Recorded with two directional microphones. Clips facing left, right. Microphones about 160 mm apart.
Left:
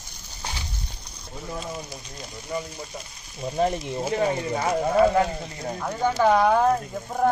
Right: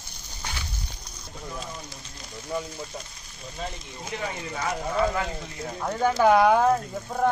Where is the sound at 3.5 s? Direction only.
55° left (ahead or behind).